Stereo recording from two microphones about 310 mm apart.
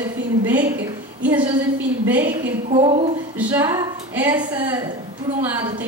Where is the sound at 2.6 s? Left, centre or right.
Centre.